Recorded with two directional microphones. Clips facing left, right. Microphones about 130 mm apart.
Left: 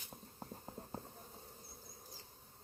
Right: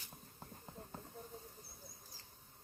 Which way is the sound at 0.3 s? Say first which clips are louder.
Left 3 dB; 30° left (ahead or behind).